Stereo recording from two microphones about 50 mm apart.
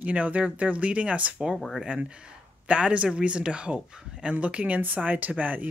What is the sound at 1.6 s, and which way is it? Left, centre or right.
Speech, centre.